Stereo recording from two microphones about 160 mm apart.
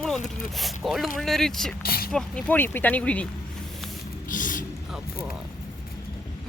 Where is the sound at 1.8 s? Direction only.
70° left (ahead or behind).